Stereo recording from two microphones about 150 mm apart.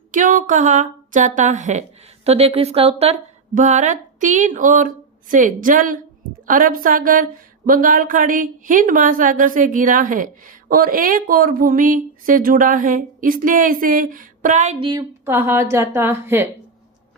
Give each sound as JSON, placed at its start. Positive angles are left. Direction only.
{"t": 0.1, "sound": "speech", "side_deg": -60}
{"t": 2.2, "sound": "a woman's voice", "side_deg": -40}
{"t": 3.5, "sound": "speech", "side_deg": -55}
{"t": 14.8, "sound": "a woman's voice", "side_deg": -30}
{"t": 15.2, "sound": "a woman's voice", "side_deg": -15}